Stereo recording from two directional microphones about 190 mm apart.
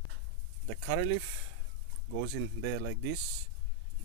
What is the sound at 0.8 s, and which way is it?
Speech, 90° right.